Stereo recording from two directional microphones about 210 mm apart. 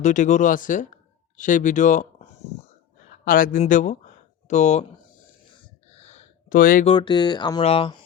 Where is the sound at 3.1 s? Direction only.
40° left (ahead or behind).